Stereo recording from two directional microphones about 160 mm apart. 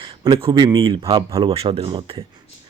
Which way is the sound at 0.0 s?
30° right (ahead or behind).